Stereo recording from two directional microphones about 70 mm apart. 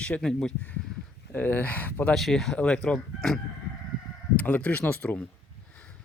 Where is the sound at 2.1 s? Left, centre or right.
Centre.